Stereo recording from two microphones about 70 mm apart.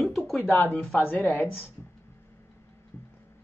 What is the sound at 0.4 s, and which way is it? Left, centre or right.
A woman's voice, left.